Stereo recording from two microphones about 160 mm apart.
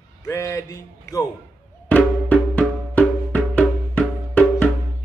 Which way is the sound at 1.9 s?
10° left (ahead or behind).